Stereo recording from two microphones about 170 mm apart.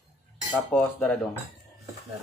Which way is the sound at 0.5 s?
10° left (ahead or behind).